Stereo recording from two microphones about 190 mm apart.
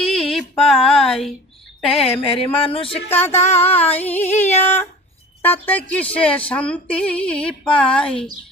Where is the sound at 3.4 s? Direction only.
35° left (ahead or behind).